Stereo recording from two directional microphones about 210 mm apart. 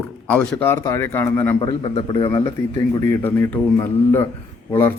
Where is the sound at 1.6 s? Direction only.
25° left (ahead or behind).